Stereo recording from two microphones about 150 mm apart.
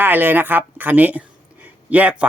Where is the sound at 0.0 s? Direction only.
15° right (ahead or behind).